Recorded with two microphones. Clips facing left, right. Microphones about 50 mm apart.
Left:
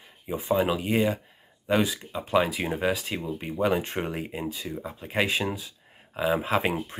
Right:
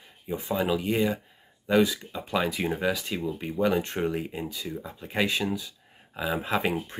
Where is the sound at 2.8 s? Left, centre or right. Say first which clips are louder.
Even; left.